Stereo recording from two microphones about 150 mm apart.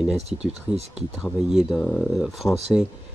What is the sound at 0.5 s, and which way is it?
Speech, 45° right (ahead or behind).